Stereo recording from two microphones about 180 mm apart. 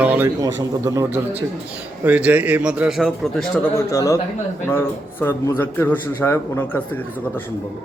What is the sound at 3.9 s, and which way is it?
A man's voice, 15° left (ahead or behind).